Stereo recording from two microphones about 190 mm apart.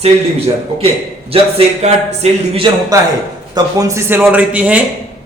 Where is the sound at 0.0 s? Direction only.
30° right (ahead or behind).